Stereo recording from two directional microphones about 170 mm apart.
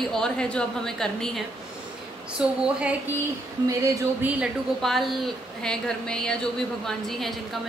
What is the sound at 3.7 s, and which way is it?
A woman's voice, 15° right (ahead or behind).